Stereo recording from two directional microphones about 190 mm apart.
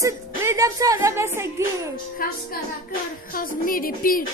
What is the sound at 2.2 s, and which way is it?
Music, 50° left (ahead or behind).